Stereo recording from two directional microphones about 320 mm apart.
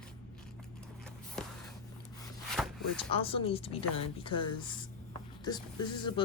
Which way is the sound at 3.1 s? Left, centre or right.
Centre.